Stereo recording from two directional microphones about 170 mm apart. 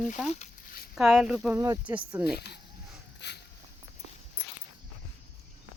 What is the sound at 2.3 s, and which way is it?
Speech, 75° left (ahead or behind).